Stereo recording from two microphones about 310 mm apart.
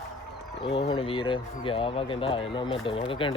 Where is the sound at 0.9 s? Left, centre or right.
Centre.